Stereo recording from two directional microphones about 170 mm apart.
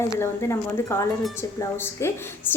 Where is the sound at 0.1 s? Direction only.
15° left (ahead or behind).